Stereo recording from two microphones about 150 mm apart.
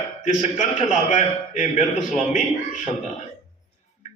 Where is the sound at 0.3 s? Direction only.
55° left (ahead or behind).